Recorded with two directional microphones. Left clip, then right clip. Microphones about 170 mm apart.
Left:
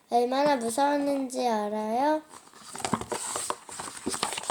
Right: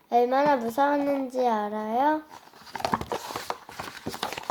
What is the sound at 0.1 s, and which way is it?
Speech, 35° left (ahead or behind).